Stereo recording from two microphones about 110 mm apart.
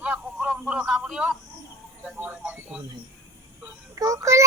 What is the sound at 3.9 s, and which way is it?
Speech, 30° right (ahead or behind).